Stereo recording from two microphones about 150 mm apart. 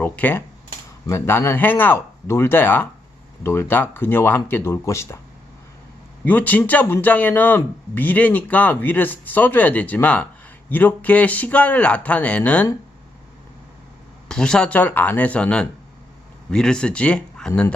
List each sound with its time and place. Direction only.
0.0 s speech: 10° left (ahead or behind)
6.2 s speech: 10° left (ahead or behind)
14.3 s speech: 5° left (ahead or behind)